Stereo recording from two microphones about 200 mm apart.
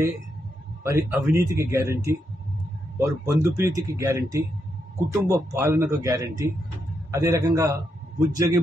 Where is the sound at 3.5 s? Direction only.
15° right (ahead or behind).